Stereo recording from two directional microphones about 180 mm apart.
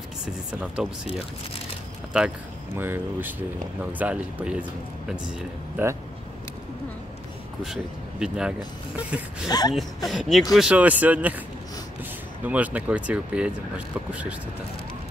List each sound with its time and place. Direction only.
2.1 s speech: 10° right (ahead or behind)
7.6 s speech: 5° right (ahead or behind)
9.5 s speech: 20° left (ahead or behind)
10.0 s speech: centre (ahead or behind)
12.4 s speech: 10° right (ahead or behind)